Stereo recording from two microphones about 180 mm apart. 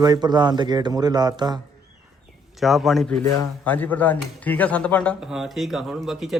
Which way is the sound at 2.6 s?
Centre (ahead or behind).